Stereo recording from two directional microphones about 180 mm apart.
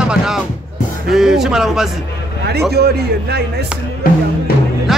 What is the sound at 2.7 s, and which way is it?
Speech, 65° right (ahead or behind).